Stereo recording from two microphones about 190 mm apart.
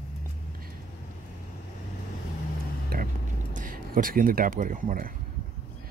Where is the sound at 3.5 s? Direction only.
45° right (ahead or behind).